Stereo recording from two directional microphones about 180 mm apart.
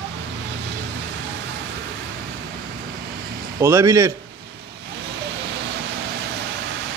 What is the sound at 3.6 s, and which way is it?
Speech, 15° right (ahead or behind).